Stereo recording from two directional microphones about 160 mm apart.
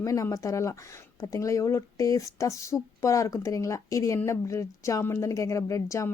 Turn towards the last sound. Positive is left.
turn(degrees=20)  # may be behind; listen again after turning